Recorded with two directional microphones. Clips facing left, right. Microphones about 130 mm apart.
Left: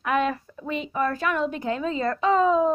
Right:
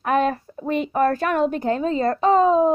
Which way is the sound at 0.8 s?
50° right (ahead or behind).